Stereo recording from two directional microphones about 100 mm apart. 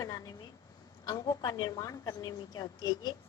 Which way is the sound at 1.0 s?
45° left (ahead or behind).